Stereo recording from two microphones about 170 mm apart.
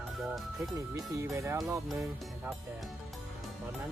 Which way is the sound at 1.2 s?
15° right (ahead or behind).